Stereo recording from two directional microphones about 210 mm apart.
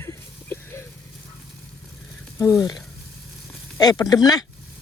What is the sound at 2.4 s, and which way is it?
Speech, 15° left (ahead or behind).